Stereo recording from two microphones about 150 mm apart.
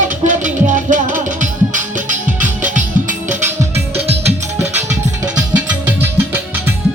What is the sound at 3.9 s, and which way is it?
Music, 40° right (ahead or behind).